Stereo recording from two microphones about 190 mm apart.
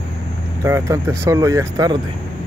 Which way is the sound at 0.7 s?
15° right (ahead or behind).